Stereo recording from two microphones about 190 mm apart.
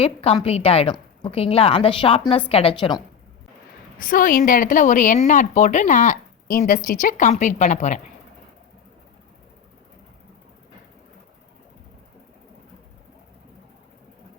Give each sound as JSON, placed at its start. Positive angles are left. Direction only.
{"t": 0.0, "sound": "a woman's voice", "side_deg": 35}
{"t": 3.9, "sound": "a woman's voice", "side_deg": 45}